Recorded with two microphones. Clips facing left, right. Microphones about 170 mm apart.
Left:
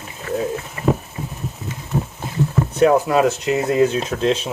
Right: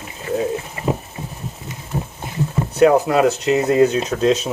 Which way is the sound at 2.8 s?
65° right (ahead or behind).